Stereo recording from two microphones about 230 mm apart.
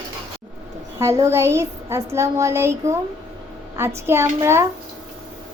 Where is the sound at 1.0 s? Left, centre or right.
Centre.